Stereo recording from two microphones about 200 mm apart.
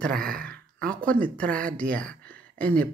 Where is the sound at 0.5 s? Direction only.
5° left (ahead or behind).